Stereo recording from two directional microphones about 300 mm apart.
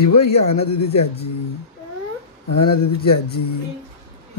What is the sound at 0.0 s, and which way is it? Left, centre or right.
Speech, left.